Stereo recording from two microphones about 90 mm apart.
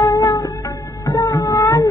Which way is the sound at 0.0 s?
40° left (ahead or behind).